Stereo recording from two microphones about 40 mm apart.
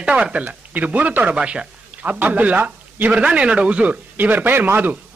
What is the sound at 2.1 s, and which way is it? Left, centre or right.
Speech, right.